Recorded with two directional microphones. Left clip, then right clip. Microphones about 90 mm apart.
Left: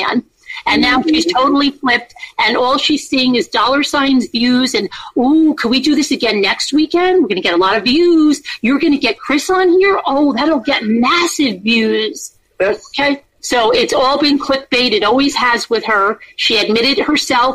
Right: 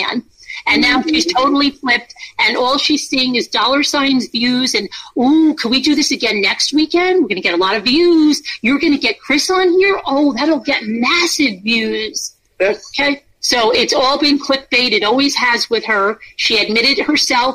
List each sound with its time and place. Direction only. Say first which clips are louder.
0.7 s a woman's voice: left 1 dB; 20° left (ahead or behind)